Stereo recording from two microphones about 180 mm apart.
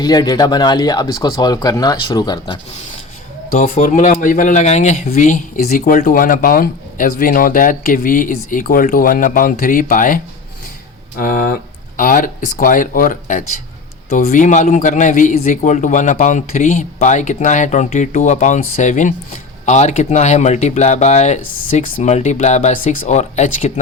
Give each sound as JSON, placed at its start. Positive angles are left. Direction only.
{"t": 0.0, "sound": "speech", "side_deg": 20}
{"t": 3.5, "sound": "speech", "side_deg": 45}
{"t": 11.2, "sound": "speech", "side_deg": 55}